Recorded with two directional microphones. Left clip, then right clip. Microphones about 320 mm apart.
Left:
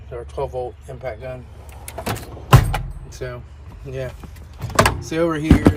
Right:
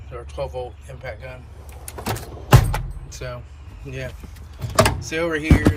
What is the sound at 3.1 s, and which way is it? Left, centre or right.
Speech, centre.